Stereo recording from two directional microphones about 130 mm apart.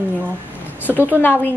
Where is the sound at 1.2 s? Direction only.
15° left (ahead or behind).